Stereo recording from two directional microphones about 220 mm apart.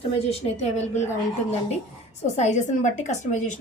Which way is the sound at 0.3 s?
30° left (ahead or behind).